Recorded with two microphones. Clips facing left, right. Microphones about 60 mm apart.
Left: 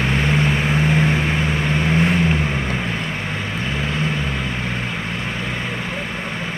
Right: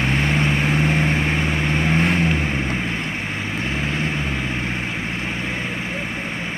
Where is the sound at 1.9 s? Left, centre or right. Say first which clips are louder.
Left 2 dB; right.